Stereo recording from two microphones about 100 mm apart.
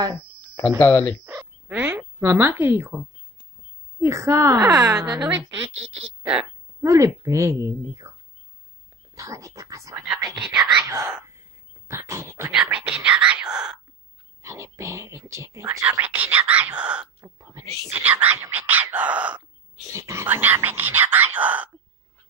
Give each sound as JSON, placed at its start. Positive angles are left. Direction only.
{"t": 0.7, "sound": "speech", "side_deg": 20}
{"t": 1.2, "sound": "frog", "side_deg": -20}
{"t": 4.0, "sound": "a woman's voice", "side_deg": -30}
{"t": 6.8, "sound": "a woman's voice", "side_deg": -30}
{"t": 9.1, "sound": "a woman's voice", "side_deg": -35}
{"t": 10.3, "sound": "speech", "side_deg": -5}
{"t": 10.9, "sound": "speech", "side_deg": -30}
{"t": 11.9, "sound": "dog", "side_deg": -30}
{"t": 12.6, "sound": "whispering", "side_deg": -10}
{"t": 14.4, "sound": "speech", "side_deg": -30}
{"t": 16.0, "sound": "speech", "side_deg": -15}
{"t": 17.2, "sound": "a sound", "side_deg": -25}
{"t": 17.8, "sound": "speech", "side_deg": -20}
{"t": 19.9, "sound": "speech", "side_deg": -30}